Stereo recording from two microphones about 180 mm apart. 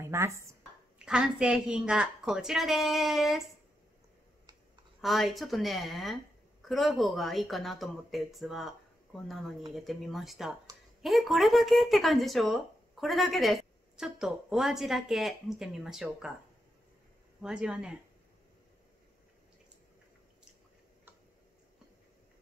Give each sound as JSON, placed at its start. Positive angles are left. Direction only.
{"t": 0.0, "sound": "speech", "side_deg": -15}
{"t": 0.9, "sound": "speech", "side_deg": -5}
{"t": 5.0, "sound": "speech", "side_deg": 0}
{"t": 17.4, "sound": "speech", "side_deg": -5}